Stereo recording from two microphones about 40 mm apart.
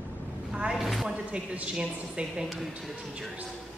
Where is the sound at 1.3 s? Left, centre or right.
Right.